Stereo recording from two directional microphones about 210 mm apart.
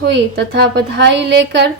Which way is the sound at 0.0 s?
55° right (ahead or behind).